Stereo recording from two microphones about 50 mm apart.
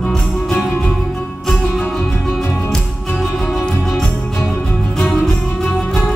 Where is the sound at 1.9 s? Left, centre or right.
Centre.